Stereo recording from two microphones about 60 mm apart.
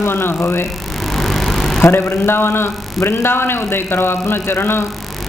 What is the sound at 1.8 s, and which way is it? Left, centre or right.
A man's voice, left.